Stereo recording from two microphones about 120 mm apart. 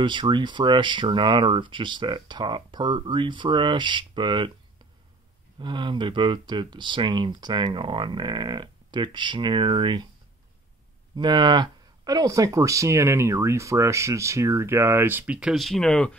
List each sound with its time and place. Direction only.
0.0 s speech: 40° right (ahead or behind)
5.6 s speech: 40° right (ahead or behind)
11.1 s speech: 40° right (ahead or behind); by 15.5 s 10° right (ahead or behind)
15.5 s speech: centre (ahead or behind)